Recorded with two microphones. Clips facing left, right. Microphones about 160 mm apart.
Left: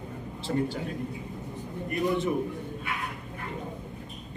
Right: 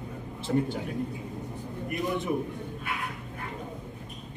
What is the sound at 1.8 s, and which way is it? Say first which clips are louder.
Speech: left 3 dB; 15° right (ahead or behind).